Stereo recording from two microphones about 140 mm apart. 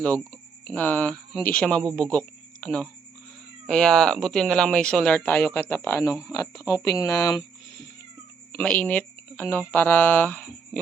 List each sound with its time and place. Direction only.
0.0 s speech: 10° left (ahead or behind)
8.5 s speech: 10° left (ahead or behind)